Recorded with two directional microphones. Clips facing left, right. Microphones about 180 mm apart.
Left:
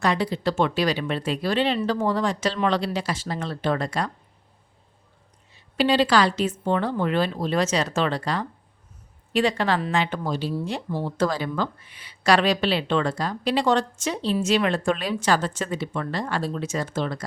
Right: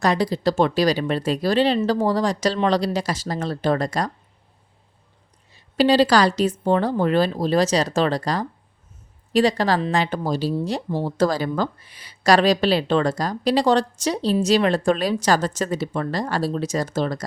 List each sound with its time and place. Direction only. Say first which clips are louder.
0.0 s speech: right 3 dB; 40° right (ahead or behind)
5.5 s speech: right 4 dB; 40° right (ahead or behind)